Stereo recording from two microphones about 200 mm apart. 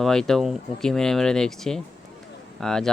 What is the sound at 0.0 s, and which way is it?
Speech, 5° left (ahead or behind).